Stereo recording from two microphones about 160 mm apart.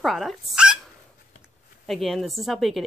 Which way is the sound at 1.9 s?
Centre (ahead or behind).